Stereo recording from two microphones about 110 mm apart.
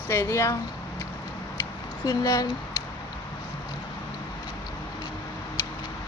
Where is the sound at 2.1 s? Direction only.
35° left (ahead or behind).